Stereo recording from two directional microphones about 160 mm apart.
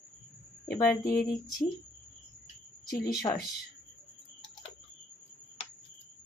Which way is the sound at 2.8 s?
25° left (ahead or behind).